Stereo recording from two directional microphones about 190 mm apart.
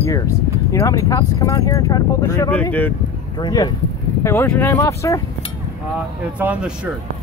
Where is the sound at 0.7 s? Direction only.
15° left (ahead or behind).